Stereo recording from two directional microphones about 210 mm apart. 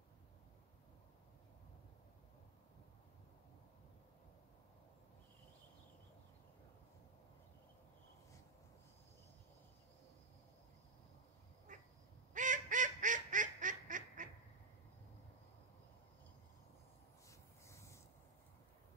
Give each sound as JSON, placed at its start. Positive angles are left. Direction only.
{"t": 11.7, "sound": "duck", "side_deg": -35}
{"t": 17.3, "sound": "rub", "side_deg": 15}